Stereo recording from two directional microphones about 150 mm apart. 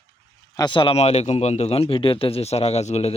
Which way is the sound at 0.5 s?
30° left (ahead or behind).